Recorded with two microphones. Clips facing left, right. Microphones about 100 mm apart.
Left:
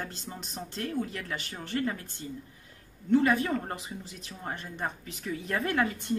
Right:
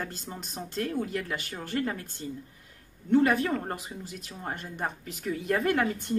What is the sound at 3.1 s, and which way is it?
Speech, 50° right (ahead or behind).